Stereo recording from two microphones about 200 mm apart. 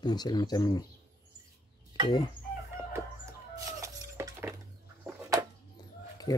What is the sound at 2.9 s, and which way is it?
Chicken, 15° right (ahead or behind).